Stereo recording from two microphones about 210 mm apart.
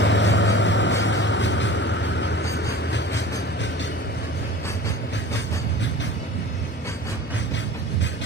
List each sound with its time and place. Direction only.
0.0 s vehicle: 60° left (ahead or behind)